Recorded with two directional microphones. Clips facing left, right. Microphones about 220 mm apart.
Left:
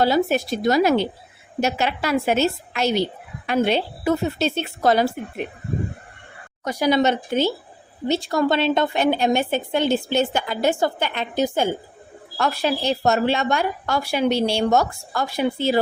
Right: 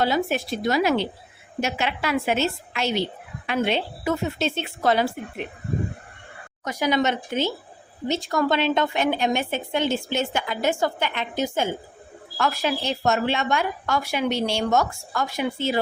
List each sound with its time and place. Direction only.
0.0 s a woman's voice: 40° left (ahead or behind)
6.7 s a woman's voice: 35° left (ahead or behind)